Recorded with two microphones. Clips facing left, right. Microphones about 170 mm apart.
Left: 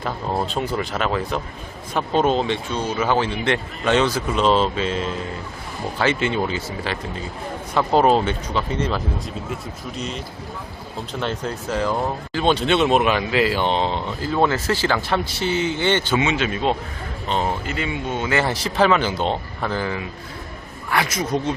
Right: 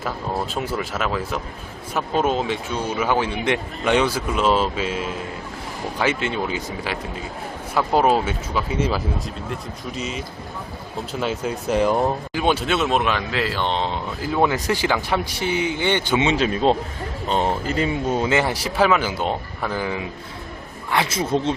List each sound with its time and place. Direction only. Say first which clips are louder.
0.4 s speech: left 2 dB; 5° right (ahead or behind)
6.1 s speech: left 3 dB; centre (ahead or behind)
6.5 s speech: even; 10° right (ahead or behind)
11.7 s speech: right 4 dB; 15° right (ahead or behind); by 14.0 s 5° left (ahead or behind)
14.3 s speech: even; 10° right (ahead or behind)
16.2 s speech: right 3 dB; 35° right (ahead or behind)
18.3 s speech: right 1 dB; 15° right (ahead or behind)
20.9 s speech: right 1 dB; 25° right (ahead or behind)